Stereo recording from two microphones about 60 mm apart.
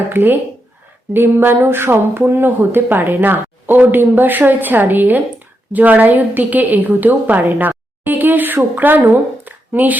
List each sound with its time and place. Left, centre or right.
0.1 s a woman's voice: right